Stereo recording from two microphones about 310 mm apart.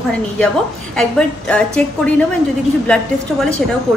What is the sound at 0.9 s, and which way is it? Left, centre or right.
A woman's voice, centre.